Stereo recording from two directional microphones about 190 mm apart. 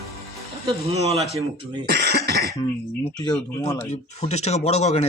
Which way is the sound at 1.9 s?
60° right (ahead or behind).